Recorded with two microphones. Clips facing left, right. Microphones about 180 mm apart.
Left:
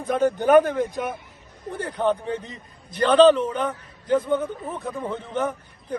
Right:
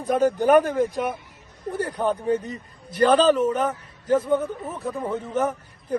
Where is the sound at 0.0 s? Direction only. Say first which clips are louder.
Right 1 dB; 10° right (ahead or behind).